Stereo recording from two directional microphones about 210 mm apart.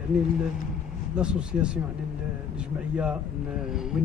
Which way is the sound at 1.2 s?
5° right (ahead or behind).